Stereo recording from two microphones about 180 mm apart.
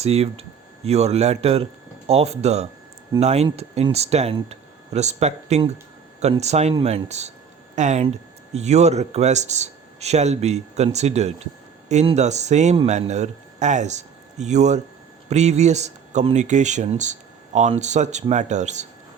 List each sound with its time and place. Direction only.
0.0 s speech: 35° right (ahead or behind)